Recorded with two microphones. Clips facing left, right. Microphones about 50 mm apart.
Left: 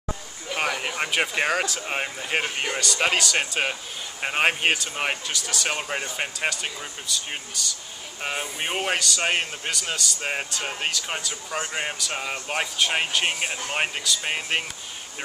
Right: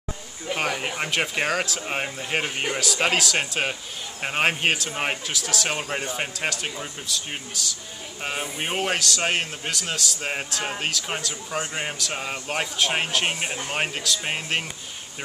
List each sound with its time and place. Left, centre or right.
0.6 s a man's voice: centre